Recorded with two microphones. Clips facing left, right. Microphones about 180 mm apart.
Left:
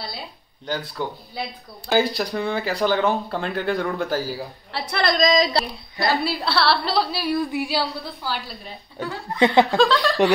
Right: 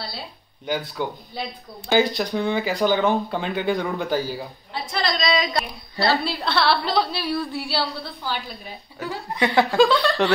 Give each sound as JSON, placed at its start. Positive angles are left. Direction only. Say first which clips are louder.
{"t": 0.7, "sound": "speech", "louder": "right 1 dB", "side_deg": 0}
{"t": 4.9, "sound": "a woman's voice", "louder": "left 4 dB", "side_deg": 50}
{"t": 5.9, "sound": "a woman's voice", "louder": "right 1 dB", "side_deg": 15}
{"t": 6.3, "sound": "speech", "louder": "even", "side_deg": 0}
{"t": 7.2, "sound": "a woman's voice", "louder": "left 3 dB", "side_deg": 15}
{"t": 8.1, "sound": "speech", "louder": "even", "side_deg": 0}
{"t": 9.4, "sound": "a woman's voice", "louder": "left 3 dB", "side_deg": 15}
{"t": 9.8, "sound": "speech", "louder": "right 1 dB", "side_deg": 0}